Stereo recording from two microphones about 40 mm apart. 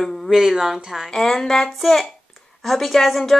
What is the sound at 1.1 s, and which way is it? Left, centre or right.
A woman's voice, centre.